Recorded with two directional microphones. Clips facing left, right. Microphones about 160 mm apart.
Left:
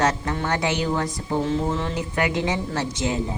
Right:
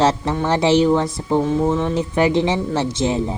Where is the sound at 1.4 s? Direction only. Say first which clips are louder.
Right 6 dB; 15° right (ahead or behind).